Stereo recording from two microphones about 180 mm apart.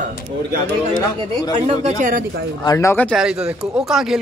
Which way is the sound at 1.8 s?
45° right (ahead or behind).